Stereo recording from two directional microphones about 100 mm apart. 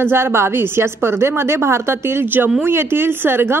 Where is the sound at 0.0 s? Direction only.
25° right (ahead or behind).